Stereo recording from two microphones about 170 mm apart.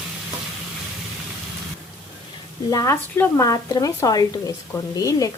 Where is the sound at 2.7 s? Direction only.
20° left (ahead or behind).